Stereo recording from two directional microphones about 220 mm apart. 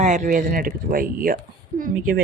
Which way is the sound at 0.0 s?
35° right (ahead or behind).